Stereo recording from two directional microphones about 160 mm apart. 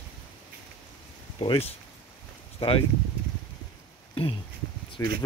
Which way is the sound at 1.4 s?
35° left (ahead or behind).